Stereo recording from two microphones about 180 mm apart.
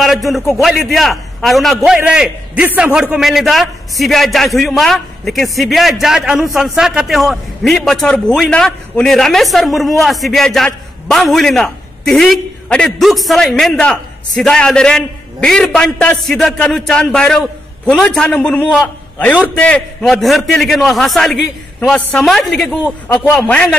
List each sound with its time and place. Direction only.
0.6 s a man's voice: centre (ahead or behind)
23.0 s a man's voice: 20° left (ahead or behind)
23.3 s a man's voice: 5° left (ahead or behind)